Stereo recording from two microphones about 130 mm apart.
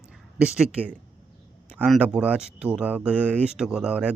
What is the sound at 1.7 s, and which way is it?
Speech, 5° left (ahead or behind).